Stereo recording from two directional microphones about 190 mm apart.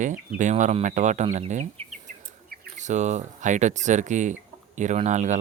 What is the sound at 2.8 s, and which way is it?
Speech, 40° right (ahead or behind).